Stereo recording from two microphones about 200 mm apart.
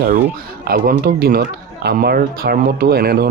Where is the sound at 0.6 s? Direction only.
45° right (ahead or behind).